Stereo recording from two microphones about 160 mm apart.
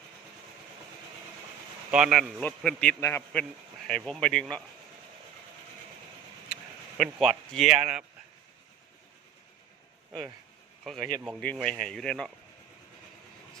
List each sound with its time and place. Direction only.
1.9 s speech: 5° right (ahead or behind)
2.4 s a man's voice: 10° left (ahead or behind)
3.8 s speech: 5° left (ahead or behind)
6.5 s speech: centre (ahead or behind)
11.3 s speech: 5° left (ahead or behind)